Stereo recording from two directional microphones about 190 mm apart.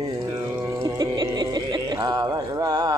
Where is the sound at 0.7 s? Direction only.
20° right (ahead or behind).